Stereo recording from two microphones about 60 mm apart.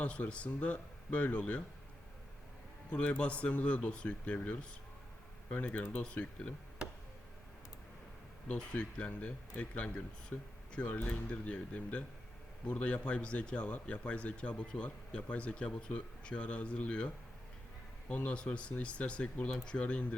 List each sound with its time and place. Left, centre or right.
0.0 s speech: left
2.9 s speech: left
8.5 s speech: centre
18.1 s speech: left